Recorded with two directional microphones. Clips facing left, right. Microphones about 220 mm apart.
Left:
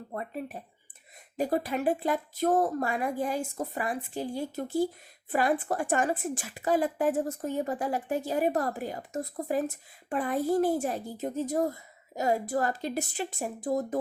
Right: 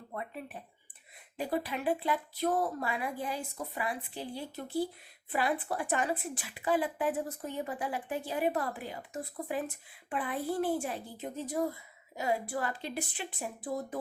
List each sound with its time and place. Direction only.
0.1 s a woman's voice: 40° left (ahead or behind)